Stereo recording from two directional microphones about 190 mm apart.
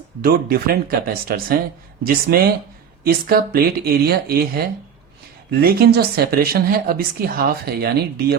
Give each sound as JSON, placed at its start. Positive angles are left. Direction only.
{"t": 0.2, "sound": "speech", "side_deg": -50}